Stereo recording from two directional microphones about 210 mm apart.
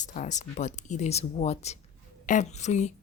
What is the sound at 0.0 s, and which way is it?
Speech, 35° left (ahead or behind).